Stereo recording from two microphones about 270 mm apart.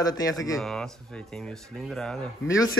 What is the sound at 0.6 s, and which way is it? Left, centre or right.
Speech, centre.